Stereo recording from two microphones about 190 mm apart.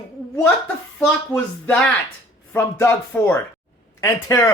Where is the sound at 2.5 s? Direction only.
10° left (ahead or behind).